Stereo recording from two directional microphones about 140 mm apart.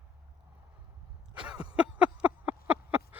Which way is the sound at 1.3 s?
5° right (ahead or behind).